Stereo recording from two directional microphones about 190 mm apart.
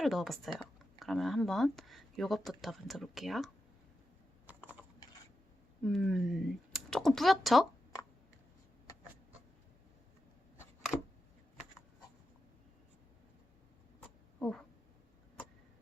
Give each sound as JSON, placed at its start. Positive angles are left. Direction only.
{"t": 0.0, "sound": "speech", "side_deg": 0}
{"t": 4.4, "sound": "typing", "side_deg": -10}
{"t": 5.8, "sound": "speech", "side_deg": 0}
{"t": 14.0, "sound": "a sound", "side_deg": 5}